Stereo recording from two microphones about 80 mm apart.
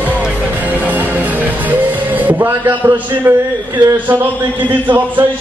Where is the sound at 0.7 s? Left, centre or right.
Right.